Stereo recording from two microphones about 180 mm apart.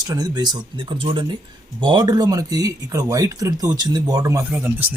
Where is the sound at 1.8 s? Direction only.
25° right (ahead or behind).